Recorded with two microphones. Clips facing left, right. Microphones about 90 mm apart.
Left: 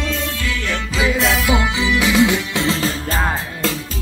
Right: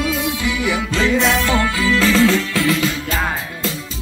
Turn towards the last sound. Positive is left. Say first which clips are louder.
# even
turn(degrees=35)  # may be behind; listen again after turning